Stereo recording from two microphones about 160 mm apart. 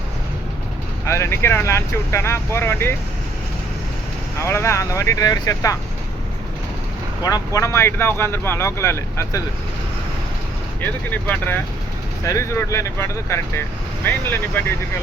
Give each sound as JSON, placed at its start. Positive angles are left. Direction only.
{"t": 1.0, "sound": "speech", "side_deg": 15}
{"t": 4.4, "sound": "speech", "side_deg": 15}
{"t": 7.2, "sound": "speech", "side_deg": 25}
{"t": 10.8, "sound": "speech", "side_deg": 10}